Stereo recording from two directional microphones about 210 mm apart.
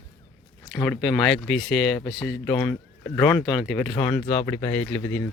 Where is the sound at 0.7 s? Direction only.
5° left (ahead or behind).